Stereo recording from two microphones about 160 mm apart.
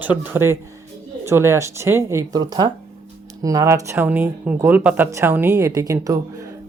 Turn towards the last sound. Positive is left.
turn(degrees=-20)  # may be behind; listen again after turning